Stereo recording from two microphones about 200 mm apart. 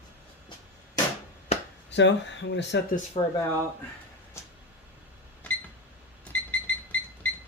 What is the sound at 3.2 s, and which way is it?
Speech, 30° left (ahead or behind).